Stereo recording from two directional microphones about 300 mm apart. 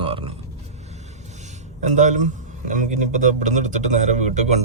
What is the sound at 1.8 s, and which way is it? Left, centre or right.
Speech, right.